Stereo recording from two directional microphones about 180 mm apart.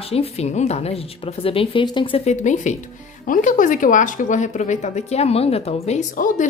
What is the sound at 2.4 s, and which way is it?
Speech, 45° left (ahead or behind).